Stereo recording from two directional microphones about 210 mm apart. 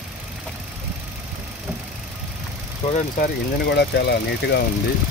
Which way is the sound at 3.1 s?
55° left (ahead or behind).